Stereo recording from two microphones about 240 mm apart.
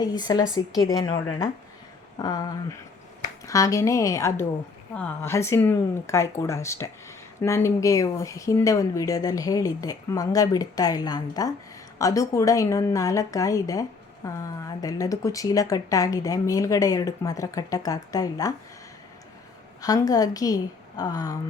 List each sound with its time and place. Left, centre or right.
0.0 s speech: centre
19.8 s speech: centre